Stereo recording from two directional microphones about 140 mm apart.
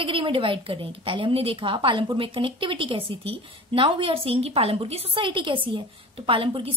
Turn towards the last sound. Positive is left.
turn(degrees=-40)  # may be behind; listen again after turning